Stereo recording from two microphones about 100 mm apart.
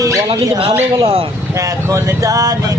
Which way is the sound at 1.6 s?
30° right (ahead or behind).